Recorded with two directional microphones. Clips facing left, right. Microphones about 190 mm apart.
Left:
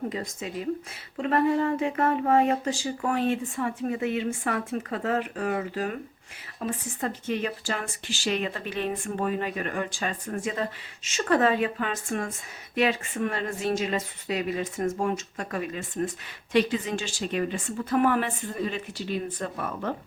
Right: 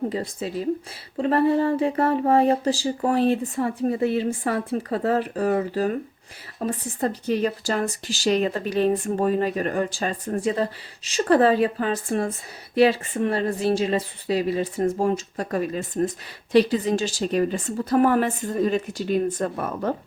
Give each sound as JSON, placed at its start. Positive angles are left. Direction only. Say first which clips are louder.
{"t": 0.1, "sound": "speech", "louder": "right 5 dB", "side_deg": -35}